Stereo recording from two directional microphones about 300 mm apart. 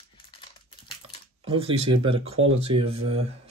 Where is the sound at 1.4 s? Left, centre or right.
Centre.